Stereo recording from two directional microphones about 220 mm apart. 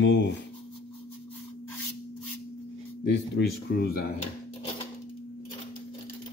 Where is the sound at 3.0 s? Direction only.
50° left (ahead or behind).